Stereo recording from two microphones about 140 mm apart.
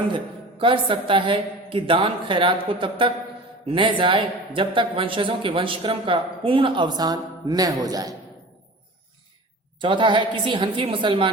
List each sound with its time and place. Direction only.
0.6 s speech: 35° right (ahead or behind)
9.8 s speech: 35° right (ahead or behind)